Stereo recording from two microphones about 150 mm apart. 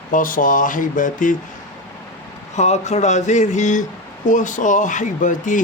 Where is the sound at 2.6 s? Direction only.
50° left (ahead or behind).